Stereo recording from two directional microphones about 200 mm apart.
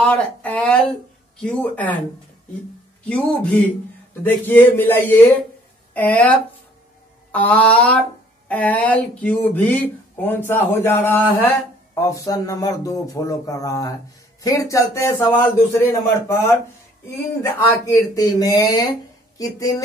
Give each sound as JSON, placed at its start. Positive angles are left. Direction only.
{"t": 0.0, "sound": "speech", "side_deg": 5}
{"t": 3.1, "sound": "speech", "side_deg": 5}
{"t": 7.3, "sound": "speech", "side_deg": 10}